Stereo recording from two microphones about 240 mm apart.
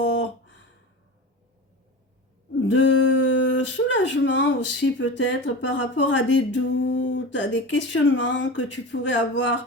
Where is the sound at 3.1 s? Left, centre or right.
Left.